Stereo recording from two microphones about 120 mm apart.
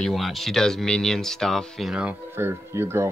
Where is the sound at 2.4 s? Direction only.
20° right (ahead or behind).